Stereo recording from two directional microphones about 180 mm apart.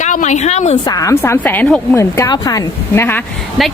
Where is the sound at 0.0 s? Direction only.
45° left (ahead or behind).